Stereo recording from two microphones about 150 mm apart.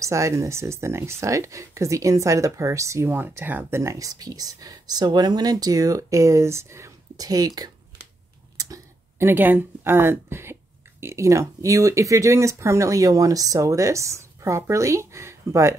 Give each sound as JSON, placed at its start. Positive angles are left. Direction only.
{"t": 0.0, "sound": "speech", "side_deg": -20}